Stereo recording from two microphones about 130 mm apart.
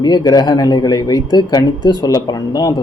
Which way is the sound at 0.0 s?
30° left (ahead or behind).